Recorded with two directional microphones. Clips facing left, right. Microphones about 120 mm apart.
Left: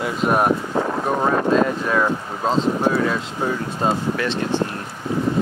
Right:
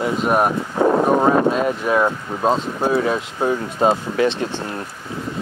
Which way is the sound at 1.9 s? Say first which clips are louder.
Right 2 dB; 15° right (ahead or behind).